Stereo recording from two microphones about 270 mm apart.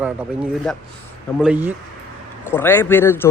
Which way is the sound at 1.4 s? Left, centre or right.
Centre.